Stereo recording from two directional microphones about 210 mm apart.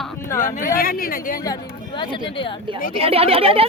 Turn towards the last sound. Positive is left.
turn(degrees=-25)  # may be behind; listen again after turning